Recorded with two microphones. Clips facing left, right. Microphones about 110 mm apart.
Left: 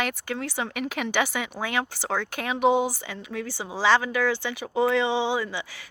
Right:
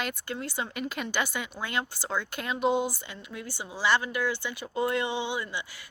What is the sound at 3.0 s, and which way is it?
Speech, 90° left.